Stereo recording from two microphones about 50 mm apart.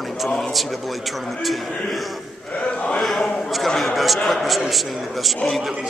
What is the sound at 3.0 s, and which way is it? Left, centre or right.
A man's voice, centre.